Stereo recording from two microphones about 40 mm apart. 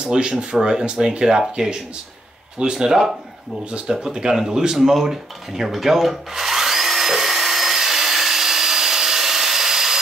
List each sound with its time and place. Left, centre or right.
0.0 s speech: right
2.6 s speech: centre
3.7 s a sound: right